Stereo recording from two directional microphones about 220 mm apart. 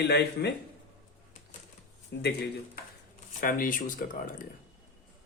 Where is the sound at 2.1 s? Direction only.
45° left (ahead or behind).